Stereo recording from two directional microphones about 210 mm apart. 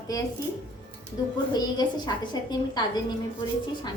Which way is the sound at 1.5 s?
20° left (ahead or behind).